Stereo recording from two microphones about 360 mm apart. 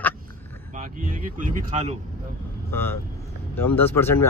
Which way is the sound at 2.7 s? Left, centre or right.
Centre.